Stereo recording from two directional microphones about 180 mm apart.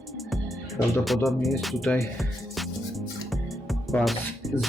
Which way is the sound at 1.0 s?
Centre (ahead or behind).